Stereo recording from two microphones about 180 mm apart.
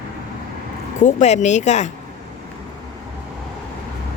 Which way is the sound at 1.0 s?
45° left (ahead or behind).